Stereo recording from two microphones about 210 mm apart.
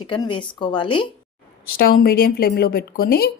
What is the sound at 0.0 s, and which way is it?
A woman's voice, 25° left (ahead or behind).